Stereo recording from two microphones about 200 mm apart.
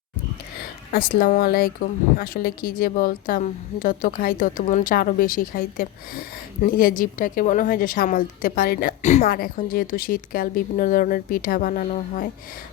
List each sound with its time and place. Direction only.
0.9 s speech: 45° left (ahead or behind)
9.2 s speech: 45° left (ahead or behind)